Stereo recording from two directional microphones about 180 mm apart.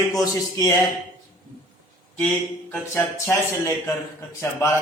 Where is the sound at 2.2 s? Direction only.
5° left (ahead or behind).